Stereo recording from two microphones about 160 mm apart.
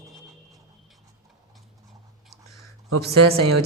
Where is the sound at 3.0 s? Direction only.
85° right.